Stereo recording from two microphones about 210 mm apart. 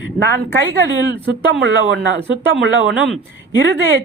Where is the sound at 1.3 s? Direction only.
65° right (ahead or behind).